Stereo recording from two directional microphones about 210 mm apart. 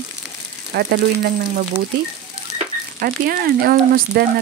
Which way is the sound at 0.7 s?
50° right (ahead or behind).